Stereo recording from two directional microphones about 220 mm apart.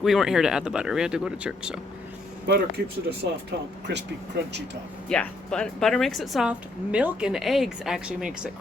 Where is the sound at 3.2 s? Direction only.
50° right (ahead or behind).